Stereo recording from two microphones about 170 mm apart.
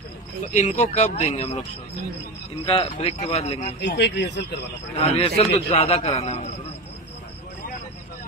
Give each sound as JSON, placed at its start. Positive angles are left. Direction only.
{"t": 0.5, "sound": "speech", "side_deg": 45}
{"t": 2.6, "sound": "a man's voice", "side_deg": 35}
{"t": 3.8, "sound": "speech", "side_deg": 90}
{"t": 5.2, "sound": "a man's voice", "side_deg": 40}